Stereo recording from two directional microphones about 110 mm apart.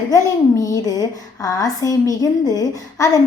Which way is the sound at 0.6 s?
35° left (ahead or behind).